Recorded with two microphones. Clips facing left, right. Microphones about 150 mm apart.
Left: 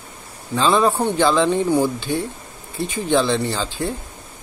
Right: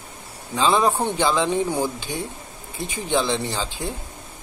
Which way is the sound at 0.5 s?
15° right (ahead or behind).